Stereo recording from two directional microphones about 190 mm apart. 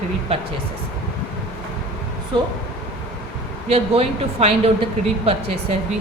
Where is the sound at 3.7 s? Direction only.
30° right (ahead or behind).